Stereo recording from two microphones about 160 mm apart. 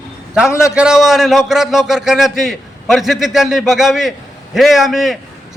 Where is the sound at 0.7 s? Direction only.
5° right (ahead or behind).